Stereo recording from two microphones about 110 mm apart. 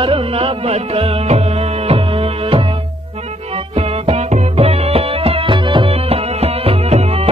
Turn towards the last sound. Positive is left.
turn(degrees=-70)  # may be behind; listen again after turning